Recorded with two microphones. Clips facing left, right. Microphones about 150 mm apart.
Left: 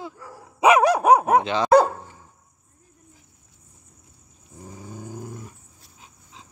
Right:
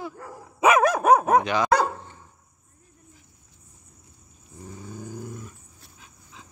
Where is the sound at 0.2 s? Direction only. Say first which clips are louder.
Right 2 dB; 55° right (ahead or behind).